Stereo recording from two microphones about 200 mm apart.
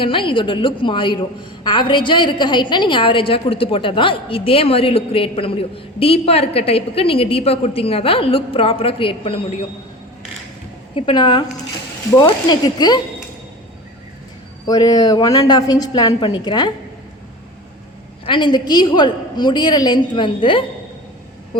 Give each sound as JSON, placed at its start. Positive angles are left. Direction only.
{"t": 0.0, "sound": "a woman's voice", "side_deg": 25}
{"t": 10.9, "sound": "a woman's voice", "side_deg": 25}
{"t": 14.7, "sound": "a woman's voice", "side_deg": 20}
{"t": 18.3, "sound": "a woman's voice", "side_deg": 20}